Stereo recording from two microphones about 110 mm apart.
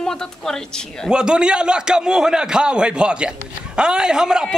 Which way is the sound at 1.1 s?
10° right (ahead or behind).